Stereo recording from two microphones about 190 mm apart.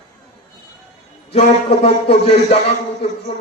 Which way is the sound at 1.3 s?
30° left (ahead or behind).